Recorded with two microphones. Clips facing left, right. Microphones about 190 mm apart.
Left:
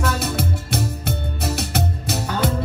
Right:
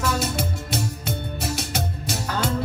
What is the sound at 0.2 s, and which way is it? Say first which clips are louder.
Music: left 2 dB; 60° left (ahead or behind).